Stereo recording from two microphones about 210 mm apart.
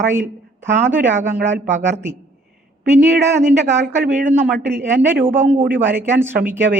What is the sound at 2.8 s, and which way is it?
A woman's voice, 45° right (ahead or behind).